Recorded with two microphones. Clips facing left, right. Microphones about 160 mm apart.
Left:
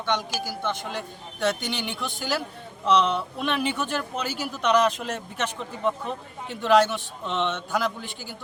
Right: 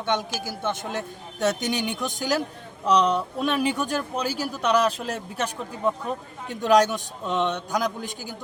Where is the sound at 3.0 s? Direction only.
15° right (ahead or behind).